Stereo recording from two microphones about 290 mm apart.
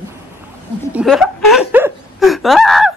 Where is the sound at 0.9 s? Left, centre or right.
Centre.